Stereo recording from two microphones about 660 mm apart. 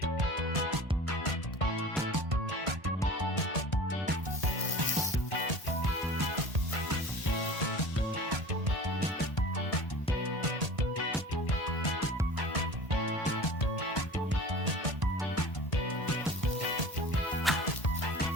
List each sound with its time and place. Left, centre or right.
2.3 s music: right
17.5 s music: centre